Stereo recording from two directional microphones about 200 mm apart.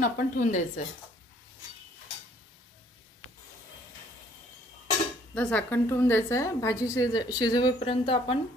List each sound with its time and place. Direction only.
0.0 s a woman's voice: 40° left (ahead or behind)
5.3 s a woman's voice: 5° left (ahead or behind); by 8.4 s 25° left (ahead or behind)